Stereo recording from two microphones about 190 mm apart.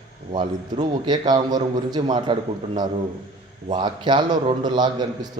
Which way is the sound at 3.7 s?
25° right (ahead or behind).